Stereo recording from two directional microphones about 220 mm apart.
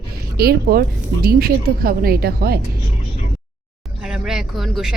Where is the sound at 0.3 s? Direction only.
45° right (ahead or behind).